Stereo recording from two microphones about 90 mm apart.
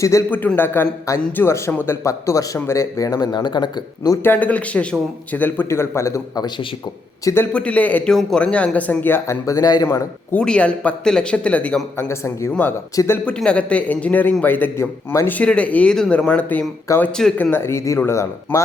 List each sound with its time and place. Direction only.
0.0 s speech: 35° left (ahead or behind)
0.3 s a man's voice: 20° left (ahead or behind); by 3.2 s 40° left (ahead or behind)
3.3 s speech: 55° left (ahead or behind)
4.2 s a man's voice: 20° left (ahead or behind)
7.5 s speech: 15° left (ahead or behind)
9.2 s speech: 35° left (ahead or behind)
10.3 s speech: 10° left (ahead or behind)
11.9 s speech: 30° left (ahead or behind)
13.2 s a man's voice: 10° left (ahead or behind)
16.9 s speech: 35° left (ahead or behind)
17.3 s a man's voice: 20° left (ahead or behind)